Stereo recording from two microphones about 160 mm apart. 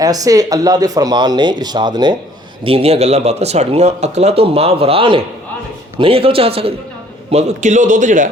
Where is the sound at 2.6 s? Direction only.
40° right (ahead or behind).